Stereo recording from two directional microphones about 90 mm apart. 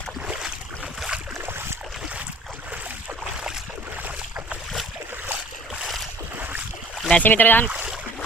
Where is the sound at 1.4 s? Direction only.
25° right (ahead or behind).